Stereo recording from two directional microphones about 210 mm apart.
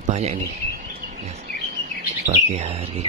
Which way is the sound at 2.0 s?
35° right (ahead or behind).